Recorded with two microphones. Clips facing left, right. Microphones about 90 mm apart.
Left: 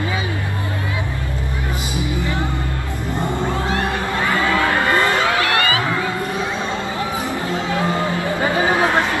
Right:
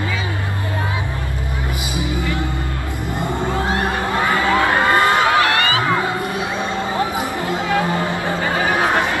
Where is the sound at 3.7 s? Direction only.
20° right (ahead or behind).